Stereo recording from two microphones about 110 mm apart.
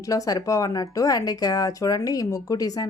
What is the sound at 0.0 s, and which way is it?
Speech, 30° left (ahead or behind).